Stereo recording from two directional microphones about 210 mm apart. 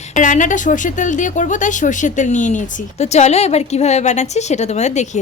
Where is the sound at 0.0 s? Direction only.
35° left (ahead or behind).